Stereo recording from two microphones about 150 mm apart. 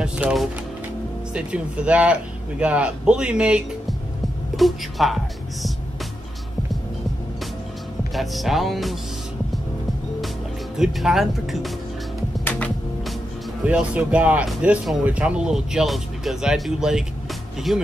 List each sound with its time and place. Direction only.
0.0 s speech: 5° right (ahead or behind)
8.1 s speech: centre (ahead or behind)
10.8 s speech: centre (ahead or behind)
12.4 s music: 10° left (ahead or behind)
13.7 s speech: 10° right (ahead or behind)